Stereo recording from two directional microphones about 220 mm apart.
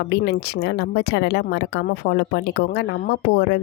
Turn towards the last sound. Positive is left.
turn(degrees=50)  # may be behind; listen again after turning